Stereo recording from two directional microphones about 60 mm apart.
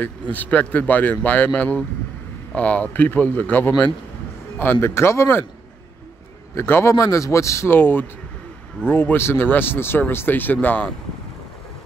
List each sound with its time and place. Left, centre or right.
0.0 s speech: left
4.7 s speech: left
6.5 s speech: left
6.9 s speech: left
7.7 s speech: left